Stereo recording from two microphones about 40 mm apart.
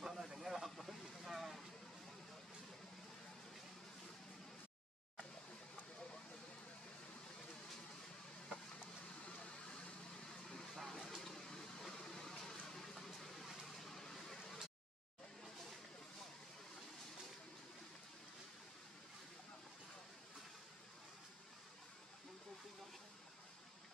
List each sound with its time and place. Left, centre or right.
0.0 s vehicle: centre
0.7 s vehicle: centre
9.2 s a sound: left
10.2 s vehicle: centre
10.8 s a sound: centre
13.7 s vehicle: centre